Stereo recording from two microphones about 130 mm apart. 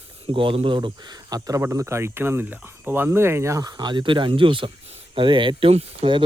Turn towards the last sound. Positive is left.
turn(degrees=-45)  # may be behind; listen again after turning